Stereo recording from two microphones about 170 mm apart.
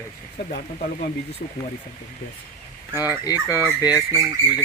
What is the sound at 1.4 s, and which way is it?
Speech, 45° left (ahead or behind).